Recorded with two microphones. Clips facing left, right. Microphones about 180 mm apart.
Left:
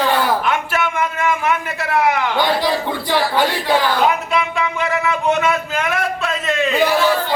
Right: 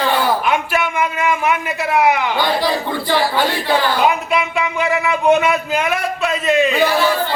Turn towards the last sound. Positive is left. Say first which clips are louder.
# right 4 dB
turn(degrees=-10)  # may be behind; listen again after turning